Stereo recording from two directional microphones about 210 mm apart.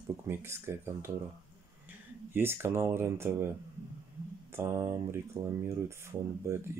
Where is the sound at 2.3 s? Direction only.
10° right (ahead or behind).